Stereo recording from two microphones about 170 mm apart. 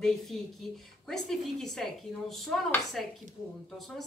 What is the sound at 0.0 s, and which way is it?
Speech, centre (ahead or behind).